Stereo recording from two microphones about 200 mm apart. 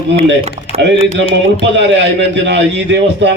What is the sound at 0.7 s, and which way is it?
Typing, 30° left (ahead or behind).